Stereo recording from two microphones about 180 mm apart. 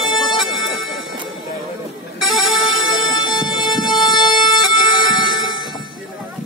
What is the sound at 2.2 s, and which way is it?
Music, centre (ahead or behind).